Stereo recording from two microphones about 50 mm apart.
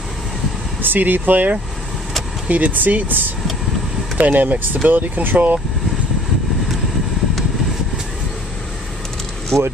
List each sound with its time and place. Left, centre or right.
0.8 s speech: right
9.5 s speech: centre